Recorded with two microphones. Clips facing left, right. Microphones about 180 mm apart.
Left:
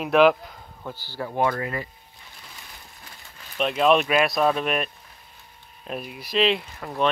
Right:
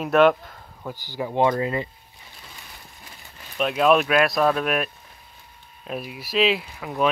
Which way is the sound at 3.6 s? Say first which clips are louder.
Right 1 dB; centre (ahead or behind).